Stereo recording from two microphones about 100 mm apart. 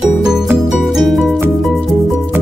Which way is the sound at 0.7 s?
Centre (ahead or behind).